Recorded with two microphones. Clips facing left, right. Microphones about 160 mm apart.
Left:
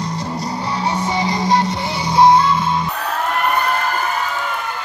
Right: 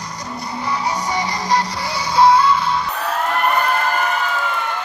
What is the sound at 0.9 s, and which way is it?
Music, 25° left (ahead or behind).